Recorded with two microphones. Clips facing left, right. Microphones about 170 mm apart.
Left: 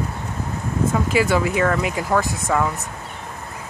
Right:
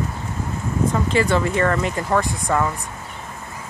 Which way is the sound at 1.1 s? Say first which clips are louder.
Left 1 dB; 5° left (ahead or behind).